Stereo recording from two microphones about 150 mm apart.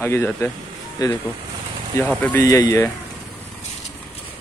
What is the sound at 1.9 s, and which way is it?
Speech, 10° left (ahead or behind).